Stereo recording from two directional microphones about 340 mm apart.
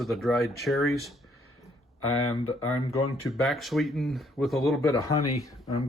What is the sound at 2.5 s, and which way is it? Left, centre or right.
Speech, left.